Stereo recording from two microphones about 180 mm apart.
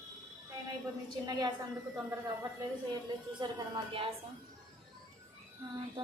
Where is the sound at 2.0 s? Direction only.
20° right (ahead or behind).